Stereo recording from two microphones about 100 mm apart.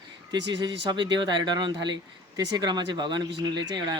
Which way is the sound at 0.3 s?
50° right (ahead or behind).